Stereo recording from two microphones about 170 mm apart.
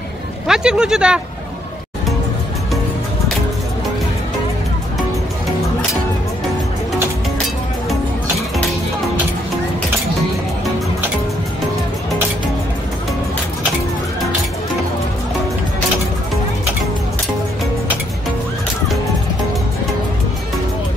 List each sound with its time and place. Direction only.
0.5 s speech: 5° right (ahead or behind)